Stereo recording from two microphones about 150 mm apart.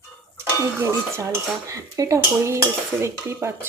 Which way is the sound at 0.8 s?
15° right (ahead or behind).